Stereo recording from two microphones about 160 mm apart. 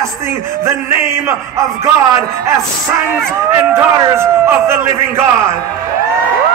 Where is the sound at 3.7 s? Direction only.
15° right (ahead or behind).